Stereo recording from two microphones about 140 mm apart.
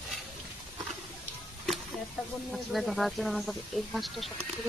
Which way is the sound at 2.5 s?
Centre (ahead or behind).